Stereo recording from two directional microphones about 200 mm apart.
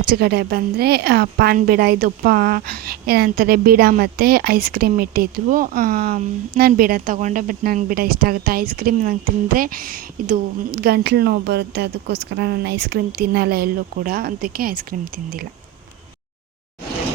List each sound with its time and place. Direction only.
0.1 s a woman's voice: 55° right (ahead or behind)